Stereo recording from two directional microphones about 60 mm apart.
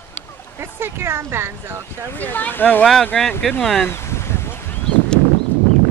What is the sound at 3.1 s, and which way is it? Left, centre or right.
Speech, centre.